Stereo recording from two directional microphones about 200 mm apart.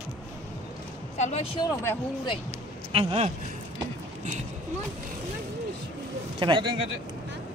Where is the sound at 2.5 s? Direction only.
30° right (ahead or behind).